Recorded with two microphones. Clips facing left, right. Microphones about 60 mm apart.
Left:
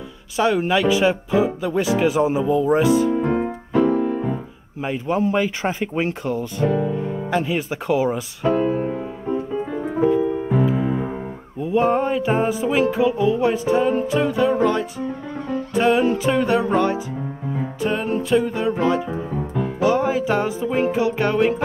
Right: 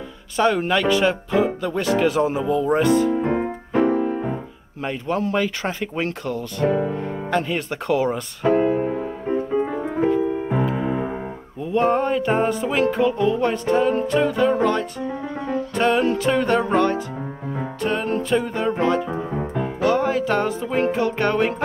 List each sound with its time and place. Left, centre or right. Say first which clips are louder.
0.4 s speech: left 1 dB; centre
3.3 s music: left 1 dB; centre
3.8 s keyboard: even; right
4.8 s speech: left 2 dB; centre
6.7 s music: even; right
7.0 s music: left 1 dB; centre
8.5 s music: right 1 dB; right
10.0 s music: left 2 dB; centre
18.8 s speech: even; centre
19.8 s music: left 1 dB; centre